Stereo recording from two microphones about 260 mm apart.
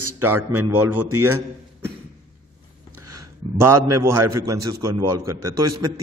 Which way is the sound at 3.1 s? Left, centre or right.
Right.